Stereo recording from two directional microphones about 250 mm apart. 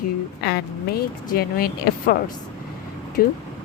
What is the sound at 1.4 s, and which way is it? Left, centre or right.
A woman's voice, left.